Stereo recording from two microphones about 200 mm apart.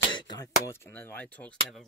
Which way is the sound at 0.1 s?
20° left (ahead or behind).